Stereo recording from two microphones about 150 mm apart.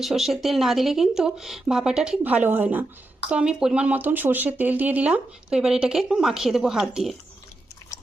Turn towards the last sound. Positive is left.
turn(degrees=-5)  # may be behind; listen again after turning